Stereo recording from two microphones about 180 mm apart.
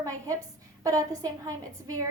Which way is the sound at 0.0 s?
15° right (ahead or behind).